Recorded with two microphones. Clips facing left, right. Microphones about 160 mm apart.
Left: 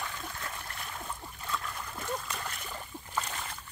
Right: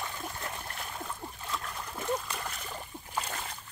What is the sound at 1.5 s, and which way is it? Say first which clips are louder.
Splash: left 1 dB; 15° right (ahead or behind).